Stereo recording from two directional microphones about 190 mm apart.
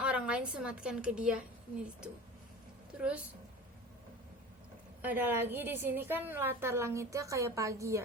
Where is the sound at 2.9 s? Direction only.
5° right (ahead or behind).